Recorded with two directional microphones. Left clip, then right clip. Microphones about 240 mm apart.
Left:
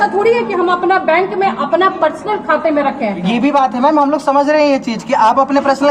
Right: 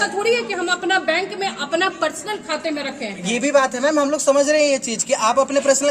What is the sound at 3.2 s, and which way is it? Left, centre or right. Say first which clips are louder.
A man's voice: left 3 dB; right.